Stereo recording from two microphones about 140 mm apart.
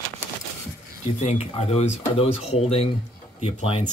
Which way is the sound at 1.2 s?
45° left (ahead or behind).